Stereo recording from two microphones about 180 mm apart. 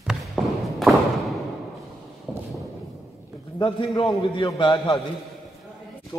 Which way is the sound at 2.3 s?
10° right (ahead or behind).